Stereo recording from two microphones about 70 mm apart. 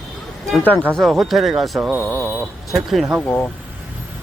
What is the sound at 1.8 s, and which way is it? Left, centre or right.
Speech, centre.